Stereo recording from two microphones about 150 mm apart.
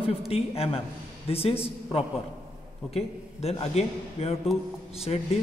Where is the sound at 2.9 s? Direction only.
45° left (ahead or behind).